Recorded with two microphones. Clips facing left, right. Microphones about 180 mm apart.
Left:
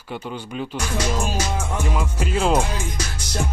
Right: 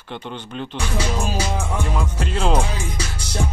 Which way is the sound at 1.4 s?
10° right (ahead or behind).